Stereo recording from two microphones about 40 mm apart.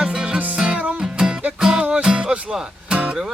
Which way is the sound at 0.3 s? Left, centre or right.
Right.